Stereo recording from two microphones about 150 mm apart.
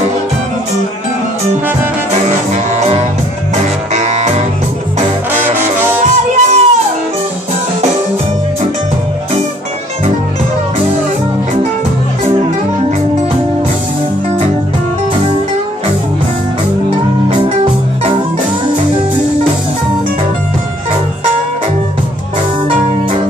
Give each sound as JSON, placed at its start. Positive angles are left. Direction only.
{"t": 3.9, "sound": "music", "side_deg": -50}
{"t": 6.3, "sound": "music", "side_deg": -50}